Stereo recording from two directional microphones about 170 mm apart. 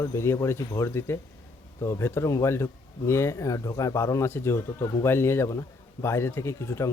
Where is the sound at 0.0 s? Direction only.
15° left (ahead or behind).